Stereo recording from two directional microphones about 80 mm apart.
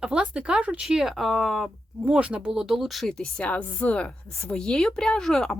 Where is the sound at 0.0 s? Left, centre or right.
Centre.